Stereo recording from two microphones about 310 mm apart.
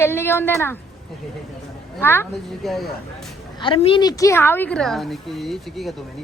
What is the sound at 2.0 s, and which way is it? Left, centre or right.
Speech, centre.